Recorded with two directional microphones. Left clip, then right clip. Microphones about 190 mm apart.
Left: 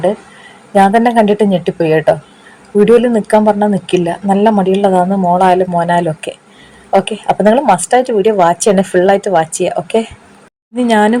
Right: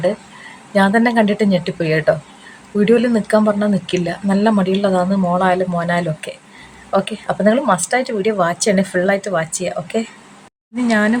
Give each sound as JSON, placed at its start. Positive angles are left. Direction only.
{"t": 0.7, "sound": "a woman's voice", "side_deg": 5}